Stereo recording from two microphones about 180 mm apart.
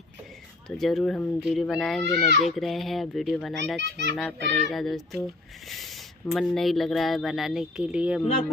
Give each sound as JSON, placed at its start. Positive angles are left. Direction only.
{"t": 0.7, "sound": "speech", "side_deg": 0}
{"t": 3.8, "sound": "a child's voice", "side_deg": -70}
{"t": 4.2, "sound": "speech", "side_deg": 0}